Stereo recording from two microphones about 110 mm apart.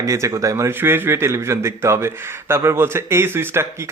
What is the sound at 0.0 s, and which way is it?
Speech, 30° right (ahead or behind).